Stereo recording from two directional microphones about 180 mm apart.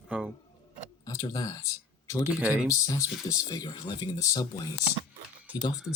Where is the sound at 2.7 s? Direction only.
20° left (ahead or behind).